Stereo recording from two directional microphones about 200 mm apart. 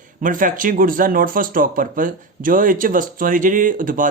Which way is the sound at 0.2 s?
40° right (ahead or behind).